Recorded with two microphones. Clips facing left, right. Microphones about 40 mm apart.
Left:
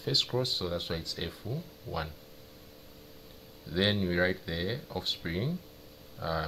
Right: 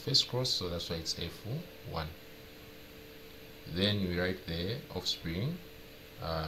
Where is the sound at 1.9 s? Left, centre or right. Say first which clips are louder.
Left 4 dB; right.